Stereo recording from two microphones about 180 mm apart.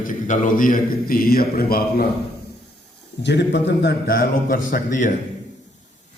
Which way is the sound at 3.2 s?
75° left (ahead or behind).